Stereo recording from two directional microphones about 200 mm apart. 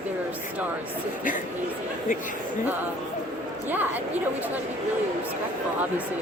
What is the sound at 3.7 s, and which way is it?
Speech, 10° right (ahead or behind).